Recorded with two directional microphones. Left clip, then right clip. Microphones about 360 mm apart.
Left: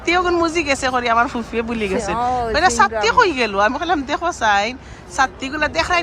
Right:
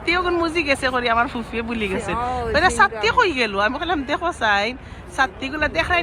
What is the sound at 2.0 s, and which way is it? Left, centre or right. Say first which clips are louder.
Speech: left 7 dB; left.